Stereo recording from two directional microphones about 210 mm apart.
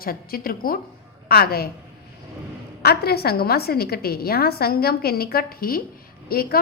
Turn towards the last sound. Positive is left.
turn(degrees=45)  # may be behind; listen again after turning